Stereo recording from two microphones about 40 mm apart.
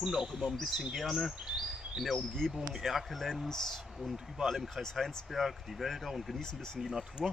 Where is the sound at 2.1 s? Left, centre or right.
Centre.